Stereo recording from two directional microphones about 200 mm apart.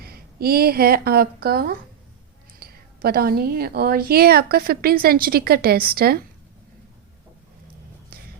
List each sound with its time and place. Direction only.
0.0 s a woman's voice: 50° right (ahead or behind)